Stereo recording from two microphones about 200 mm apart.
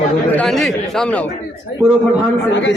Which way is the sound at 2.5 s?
60° left (ahead or behind).